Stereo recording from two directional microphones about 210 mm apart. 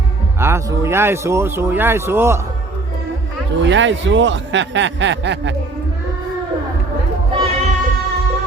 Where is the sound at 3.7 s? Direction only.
60° right (ahead or behind).